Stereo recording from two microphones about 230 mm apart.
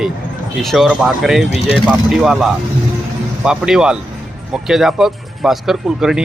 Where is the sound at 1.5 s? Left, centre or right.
Left.